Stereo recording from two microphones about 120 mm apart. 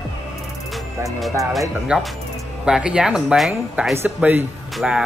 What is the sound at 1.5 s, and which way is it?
Speech, centre (ahead or behind).